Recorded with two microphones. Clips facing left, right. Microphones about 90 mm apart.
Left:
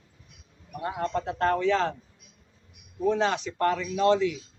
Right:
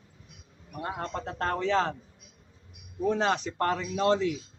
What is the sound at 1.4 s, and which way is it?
Speech, 35° right (ahead or behind).